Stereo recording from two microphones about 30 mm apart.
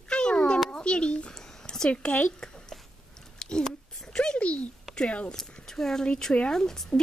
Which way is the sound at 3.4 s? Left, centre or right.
Left.